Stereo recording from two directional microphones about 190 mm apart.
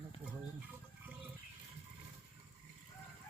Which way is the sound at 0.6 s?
10° right (ahead or behind).